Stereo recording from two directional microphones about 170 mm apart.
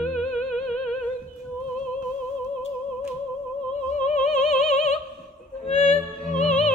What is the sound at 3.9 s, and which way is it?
Music, 45° left (ahead or behind).